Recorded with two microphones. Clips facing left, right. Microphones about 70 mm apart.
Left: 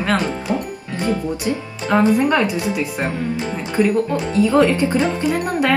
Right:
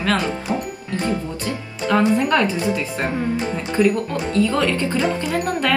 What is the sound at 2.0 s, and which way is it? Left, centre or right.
Speech, left.